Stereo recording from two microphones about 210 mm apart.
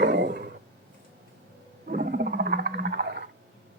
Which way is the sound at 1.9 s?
45° right (ahead or behind).